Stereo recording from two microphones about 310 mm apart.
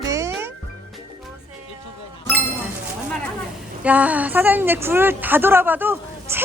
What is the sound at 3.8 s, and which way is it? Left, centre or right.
A woman's voice, centre.